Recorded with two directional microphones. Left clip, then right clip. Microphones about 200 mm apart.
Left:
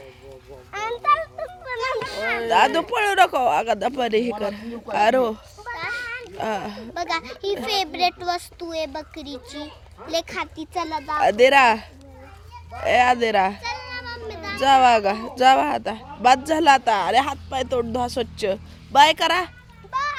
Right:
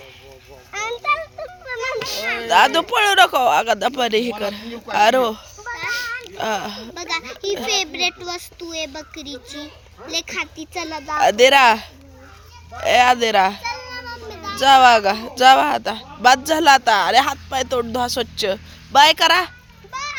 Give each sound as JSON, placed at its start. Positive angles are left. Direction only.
{"t": 0.7, "sound": "a sound", "side_deg": 5}
{"t": 2.5, "sound": "speech", "side_deg": 0}
{"t": 5.7, "sound": "children playing", "side_deg": -45}
{"t": 6.3, "sound": "speech", "side_deg": 5}
{"t": 6.9, "sound": "a child's voice", "side_deg": 15}
{"t": 10.8, "sound": "speech", "side_deg": -5}
{"t": 13.6, "sound": "children playing", "side_deg": -45}
{"t": 14.6, "sound": "speech", "side_deg": 0}
{"t": 19.9, "sound": "children playing", "side_deg": 10}